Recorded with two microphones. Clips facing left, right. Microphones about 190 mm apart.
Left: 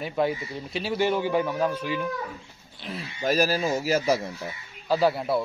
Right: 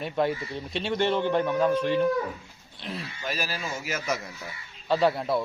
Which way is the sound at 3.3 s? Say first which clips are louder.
Left 10 dB; 40° left (ahead or behind).